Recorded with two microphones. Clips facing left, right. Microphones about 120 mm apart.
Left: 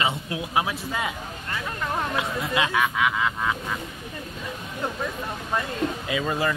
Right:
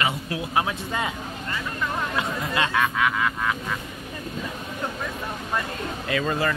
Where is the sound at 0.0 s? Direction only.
25° left (ahead or behind).